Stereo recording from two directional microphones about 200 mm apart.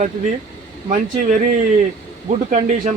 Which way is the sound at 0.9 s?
40° right (ahead or behind).